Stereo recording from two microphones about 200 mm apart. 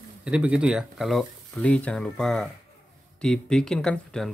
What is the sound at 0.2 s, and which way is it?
Speech, 5° right (ahead or behind).